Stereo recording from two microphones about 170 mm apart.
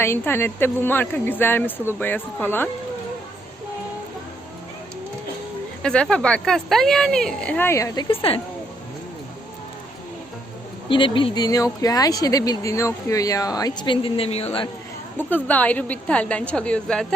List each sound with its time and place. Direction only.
0.0 s a woman's voice: 15° left (ahead or behind)
5.8 s speech: 5° left (ahead or behind)
8.0 s a woman's voice: 35° left (ahead or behind)
10.8 s speech: 30° left (ahead or behind)
15.2 s a woman's voice: 10° left (ahead or behind)